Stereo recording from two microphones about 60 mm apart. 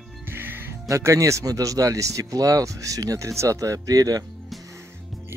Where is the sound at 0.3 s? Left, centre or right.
Right.